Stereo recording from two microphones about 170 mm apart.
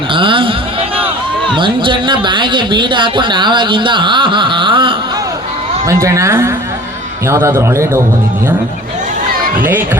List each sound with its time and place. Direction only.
0.1 s a sound: 30° right (ahead or behind)
1.5 s speech: 30° right (ahead or behind)
5.9 s a man's voice: 20° right (ahead or behind)